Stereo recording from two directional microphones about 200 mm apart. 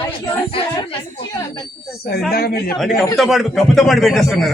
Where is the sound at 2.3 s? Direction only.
50° left (ahead or behind).